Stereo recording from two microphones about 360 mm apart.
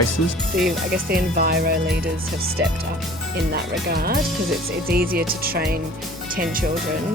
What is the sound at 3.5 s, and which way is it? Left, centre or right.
Speech, right.